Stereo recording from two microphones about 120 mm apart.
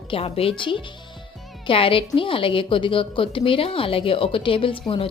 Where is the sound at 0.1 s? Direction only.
55° left (ahead or behind).